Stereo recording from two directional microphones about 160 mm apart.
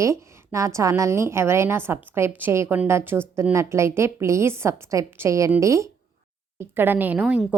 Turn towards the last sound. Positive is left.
turn(degrees=-5)  # may be behind; listen again after turning